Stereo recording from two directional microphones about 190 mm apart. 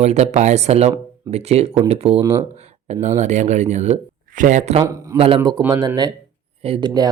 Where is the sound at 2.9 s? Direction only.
35° right (ahead or behind).